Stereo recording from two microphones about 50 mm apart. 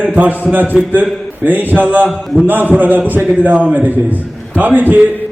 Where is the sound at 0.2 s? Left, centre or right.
Right.